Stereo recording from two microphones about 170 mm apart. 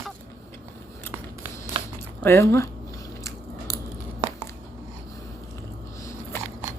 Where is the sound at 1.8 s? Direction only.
30° right (ahead or behind).